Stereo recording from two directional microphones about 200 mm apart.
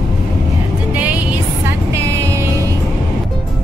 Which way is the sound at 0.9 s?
5° right (ahead or behind).